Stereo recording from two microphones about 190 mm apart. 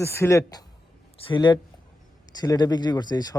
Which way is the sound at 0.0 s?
15° left (ahead or behind).